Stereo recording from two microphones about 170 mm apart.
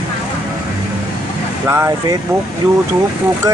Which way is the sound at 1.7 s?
15° right (ahead or behind).